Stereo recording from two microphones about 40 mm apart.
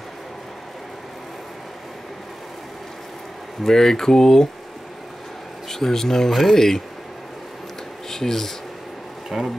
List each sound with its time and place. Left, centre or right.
3.6 s speech: centre
5.7 s speech: centre
8.1 s speech: centre
9.3 s speech: centre